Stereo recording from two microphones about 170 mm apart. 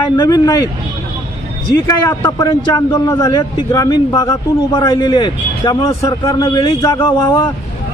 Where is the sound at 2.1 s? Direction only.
20° left (ahead or behind).